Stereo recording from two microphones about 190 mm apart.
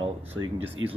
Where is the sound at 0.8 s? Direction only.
90° right.